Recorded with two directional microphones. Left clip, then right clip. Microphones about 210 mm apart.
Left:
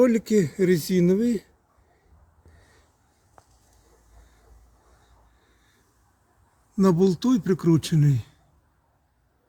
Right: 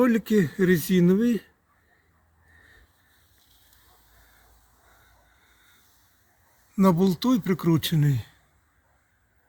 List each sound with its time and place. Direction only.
0.0 s speech: 25° right (ahead or behind)
6.7 s speech: 10° right (ahead or behind)